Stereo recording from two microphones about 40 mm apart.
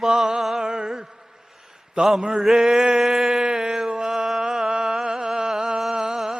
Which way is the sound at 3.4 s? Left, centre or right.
Centre.